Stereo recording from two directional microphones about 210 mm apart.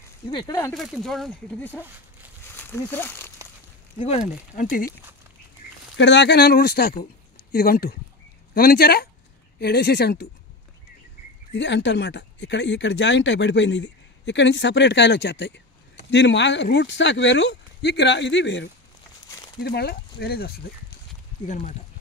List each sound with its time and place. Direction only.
0.3 s speech: 20° left (ahead or behind)
0.7 s speech: centre (ahead or behind)
2.4 s a sound: 10° left (ahead or behind)
4.0 s speech: 30° left (ahead or behind)
5.9 s speech: 55° left (ahead or behind)
11.5 s speech: 55° left (ahead or behind)